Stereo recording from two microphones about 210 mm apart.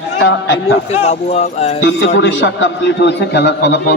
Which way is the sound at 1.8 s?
60° left (ahead or behind).